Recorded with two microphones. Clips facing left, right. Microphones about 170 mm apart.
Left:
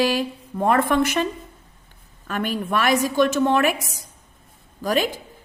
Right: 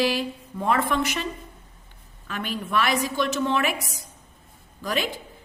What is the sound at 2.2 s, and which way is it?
A woman's voice, 45° left (ahead or behind).